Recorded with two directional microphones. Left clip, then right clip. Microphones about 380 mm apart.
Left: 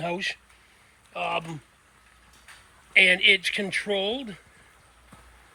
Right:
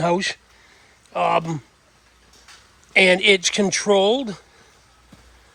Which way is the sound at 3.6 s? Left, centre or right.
Right.